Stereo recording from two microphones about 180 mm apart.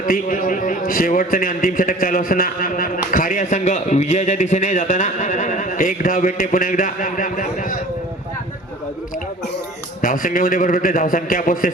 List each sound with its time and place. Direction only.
0.0 s a man's voice: 50° left (ahead or behind)
10.0 s a man's voice: 50° left (ahead or behind)